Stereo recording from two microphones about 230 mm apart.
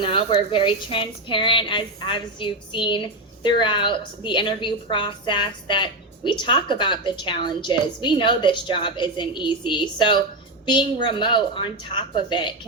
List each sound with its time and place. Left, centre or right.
0.0 s a woman's voice: left